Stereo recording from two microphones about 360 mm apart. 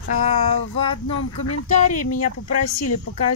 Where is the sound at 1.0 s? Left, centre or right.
Left.